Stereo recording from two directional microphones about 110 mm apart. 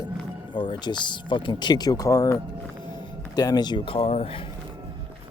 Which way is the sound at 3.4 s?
40° left (ahead or behind).